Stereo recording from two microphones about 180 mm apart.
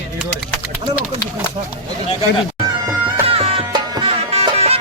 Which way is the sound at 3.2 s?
35° right (ahead or behind).